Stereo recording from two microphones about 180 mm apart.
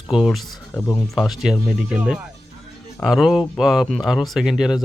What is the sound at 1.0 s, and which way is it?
Speech, centre (ahead or behind).